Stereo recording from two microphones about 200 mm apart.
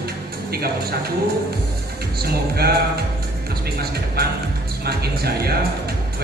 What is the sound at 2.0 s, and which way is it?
Speech, 50° right (ahead or behind).